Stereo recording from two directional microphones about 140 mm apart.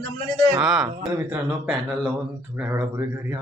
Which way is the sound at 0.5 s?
5° right (ahead or behind).